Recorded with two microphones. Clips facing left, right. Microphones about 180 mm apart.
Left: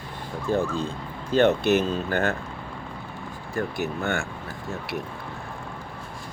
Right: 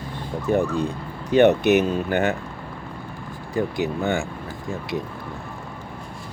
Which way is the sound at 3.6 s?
15° right (ahead or behind).